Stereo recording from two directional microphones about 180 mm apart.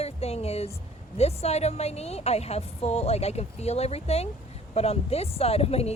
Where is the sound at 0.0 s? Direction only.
35° left (ahead or behind).